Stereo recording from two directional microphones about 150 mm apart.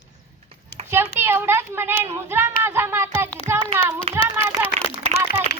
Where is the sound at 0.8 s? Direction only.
45° right (ahead or behind).